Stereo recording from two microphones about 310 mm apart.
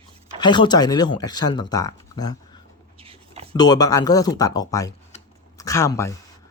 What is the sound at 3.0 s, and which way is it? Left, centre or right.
Writing, centre.